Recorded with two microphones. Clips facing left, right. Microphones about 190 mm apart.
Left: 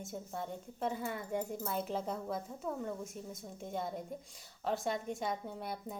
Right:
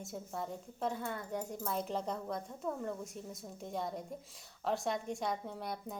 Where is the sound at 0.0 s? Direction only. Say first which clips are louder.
Even; centre (ahead or behind).